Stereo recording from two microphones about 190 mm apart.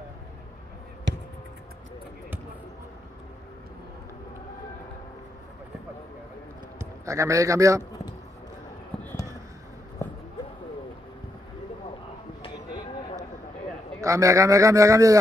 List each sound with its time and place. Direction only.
1.1 s basketball bounce: 70° right (ahead or behind)
6.8 s a man's voice: 15° right (ahead or behind)
14.0 s a man's voice: 15° right (ahead or behind)